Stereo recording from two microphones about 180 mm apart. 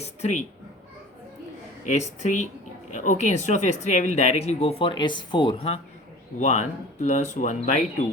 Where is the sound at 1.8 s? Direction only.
40° left (ahead or behind).